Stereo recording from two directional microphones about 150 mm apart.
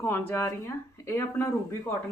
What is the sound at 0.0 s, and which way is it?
A woman's voice, 15° left (ahead or behind).